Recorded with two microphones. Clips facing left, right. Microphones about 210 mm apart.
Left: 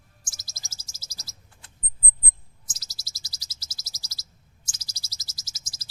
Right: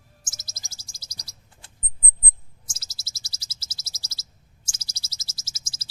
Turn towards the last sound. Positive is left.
turn(degrees=-25)  # may be behind; listen again after turning